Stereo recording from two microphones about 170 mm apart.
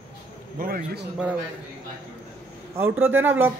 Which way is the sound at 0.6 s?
65° right (ahead or behind).